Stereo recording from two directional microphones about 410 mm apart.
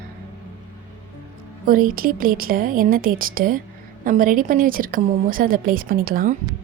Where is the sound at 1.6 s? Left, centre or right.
Right.